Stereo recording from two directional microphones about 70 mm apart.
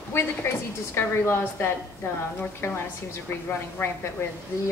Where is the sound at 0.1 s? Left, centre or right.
Left.